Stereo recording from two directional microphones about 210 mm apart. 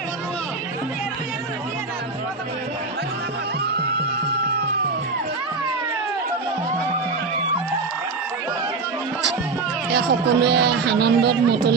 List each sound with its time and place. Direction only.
9.9 s speech: 50° right (ahead or behind)